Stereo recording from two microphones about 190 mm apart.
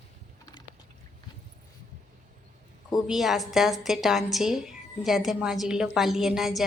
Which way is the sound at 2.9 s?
Centre (ahead or behind).